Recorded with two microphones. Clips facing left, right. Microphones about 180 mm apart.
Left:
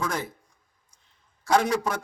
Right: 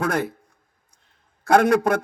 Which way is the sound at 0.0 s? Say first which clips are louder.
Right 7 dB; 60° right (ahead or behind).